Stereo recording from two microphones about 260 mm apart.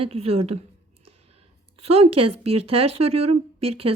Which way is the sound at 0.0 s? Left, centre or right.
Right.